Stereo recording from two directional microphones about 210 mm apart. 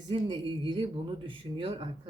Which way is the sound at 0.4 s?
25° right (ahead or behind).